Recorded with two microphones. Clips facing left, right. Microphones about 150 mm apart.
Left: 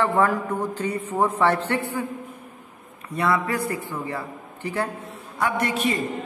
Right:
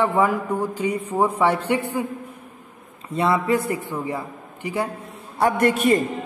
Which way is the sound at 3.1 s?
25° right (ahead or behind).